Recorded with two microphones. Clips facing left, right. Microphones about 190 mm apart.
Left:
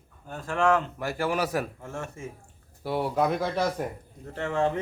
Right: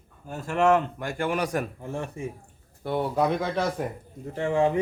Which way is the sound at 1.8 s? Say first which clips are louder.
Right 4 dB; 15° right (ahead or behind).